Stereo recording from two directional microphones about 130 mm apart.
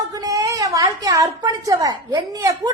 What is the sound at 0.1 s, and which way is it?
A woman's voice, 25° right (ahead or behind).